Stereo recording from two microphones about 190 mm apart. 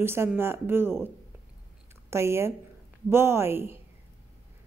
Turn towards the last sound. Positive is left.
turn(degrees=-10)  # may be behind; listen again after turning